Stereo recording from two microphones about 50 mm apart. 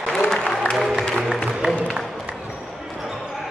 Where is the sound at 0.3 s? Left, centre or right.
Centre.